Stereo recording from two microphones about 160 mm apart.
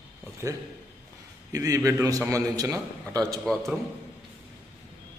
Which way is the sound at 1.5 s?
20° right (ahead or behind).